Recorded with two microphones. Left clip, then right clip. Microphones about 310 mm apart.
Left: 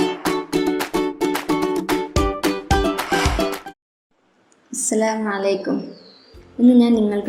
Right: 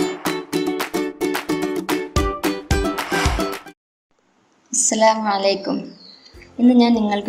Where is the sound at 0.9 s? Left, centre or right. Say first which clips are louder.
Left 1 dB; left.